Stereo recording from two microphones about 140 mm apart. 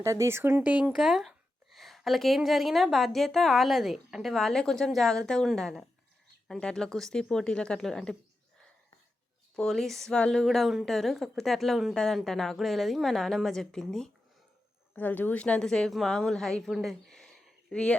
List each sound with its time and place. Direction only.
0.0 s a woman's voice: 20° right (ahead or behind); by 8.1 s 5° left (ahead or behind)
9.6 s a woman's voice: centre (ahead or behind)